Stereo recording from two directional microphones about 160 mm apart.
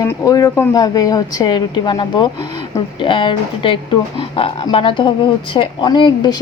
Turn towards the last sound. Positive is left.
turn(degrees=25)  # may be behind; listen again after turning